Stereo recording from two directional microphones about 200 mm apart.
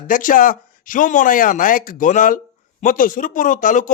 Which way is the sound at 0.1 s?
40° left (ahead or behind).